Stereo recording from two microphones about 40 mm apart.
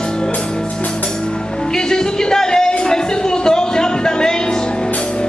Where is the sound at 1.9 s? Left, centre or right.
Centre.